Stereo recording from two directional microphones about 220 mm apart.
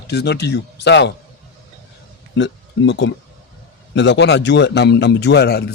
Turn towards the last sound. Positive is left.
turn(degrees=45)  # may be behind; listen again after turning